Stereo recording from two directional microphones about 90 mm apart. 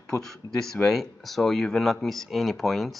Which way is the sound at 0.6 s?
5° left (ahead or behind).